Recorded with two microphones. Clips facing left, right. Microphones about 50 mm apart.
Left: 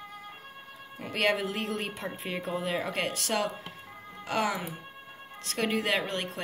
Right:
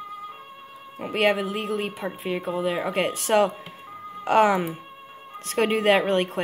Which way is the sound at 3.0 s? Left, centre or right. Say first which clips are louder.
Right 9 dB; right.